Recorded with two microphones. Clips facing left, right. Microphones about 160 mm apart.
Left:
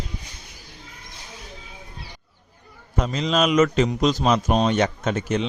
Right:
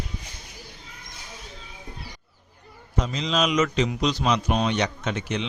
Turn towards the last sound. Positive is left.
turn(degrees=45)  # may be behind; listen again after turning